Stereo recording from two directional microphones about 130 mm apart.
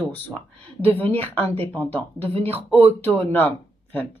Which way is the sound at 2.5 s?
50° right (ahead or behind).